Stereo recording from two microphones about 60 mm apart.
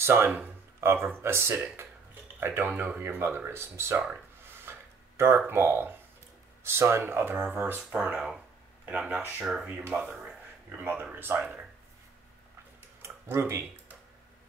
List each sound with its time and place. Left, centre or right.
0.0 s speech: right
4.4 s a sound: right
5.5 s speech: right
8.8 s speech: right
9.4 s speech: centre
9.8 s speech: right
10.7 s speech: right
13.0 s tick-tock: right